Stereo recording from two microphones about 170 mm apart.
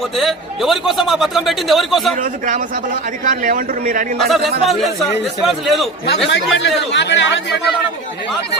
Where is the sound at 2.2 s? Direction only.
50° right (ahead or behind).